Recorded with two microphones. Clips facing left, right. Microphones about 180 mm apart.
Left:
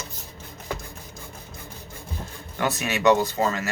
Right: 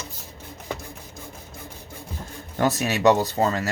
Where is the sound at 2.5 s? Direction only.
40° right (ahead or behind).